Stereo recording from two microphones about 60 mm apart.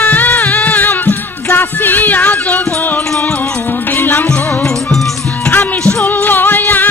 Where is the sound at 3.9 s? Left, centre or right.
Left.